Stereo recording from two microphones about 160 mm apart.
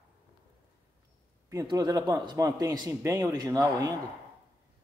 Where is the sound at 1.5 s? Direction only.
25° right (ahead or behind).